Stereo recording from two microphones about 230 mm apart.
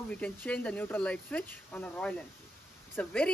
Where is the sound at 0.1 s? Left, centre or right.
Centre.